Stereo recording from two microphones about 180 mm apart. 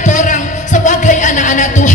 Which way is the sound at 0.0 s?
45° left (ahead or behind).